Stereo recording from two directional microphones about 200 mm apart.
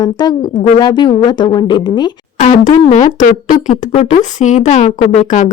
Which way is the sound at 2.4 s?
35° left (ahead or behind).